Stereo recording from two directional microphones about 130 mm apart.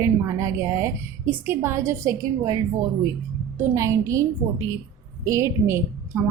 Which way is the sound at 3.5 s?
25° right (ahead or behind).